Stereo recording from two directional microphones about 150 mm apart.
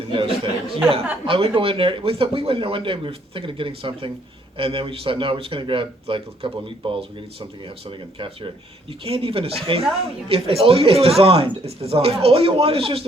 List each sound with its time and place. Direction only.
0.1 s speech: 35° right (ahead or behind)